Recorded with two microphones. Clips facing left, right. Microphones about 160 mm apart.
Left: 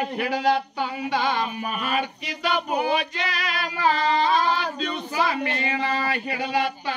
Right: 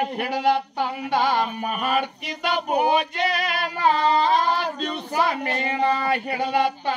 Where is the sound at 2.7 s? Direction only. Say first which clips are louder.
Right 3 dB; 55° right (ahead or behind).